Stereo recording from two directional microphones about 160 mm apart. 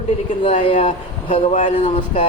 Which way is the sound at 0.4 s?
35° left (ahead or behind).